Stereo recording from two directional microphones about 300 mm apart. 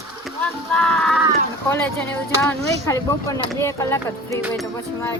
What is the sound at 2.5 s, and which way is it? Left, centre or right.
Speech, centre.